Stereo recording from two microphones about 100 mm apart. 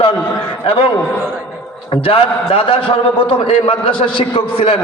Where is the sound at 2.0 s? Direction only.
70° left (ahead or behind).